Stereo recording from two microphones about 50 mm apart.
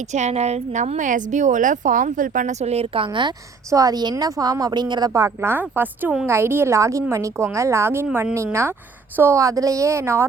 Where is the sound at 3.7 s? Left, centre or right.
Right.